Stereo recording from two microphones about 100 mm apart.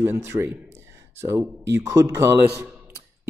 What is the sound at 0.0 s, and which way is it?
Speech, 25° right (ahead or behind).